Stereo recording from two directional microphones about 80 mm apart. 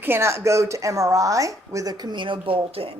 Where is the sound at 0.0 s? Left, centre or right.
Right.